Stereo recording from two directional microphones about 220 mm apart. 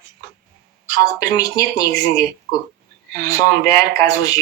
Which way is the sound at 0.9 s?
15° left (ahead or behind).